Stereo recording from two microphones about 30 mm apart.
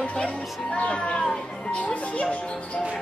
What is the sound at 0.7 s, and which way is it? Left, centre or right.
Speech, left.